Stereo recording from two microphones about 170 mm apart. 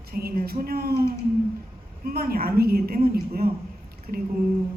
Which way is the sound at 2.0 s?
60° right (ahead or behind).